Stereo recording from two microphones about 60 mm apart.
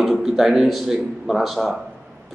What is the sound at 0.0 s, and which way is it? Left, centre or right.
A man's voice, centre.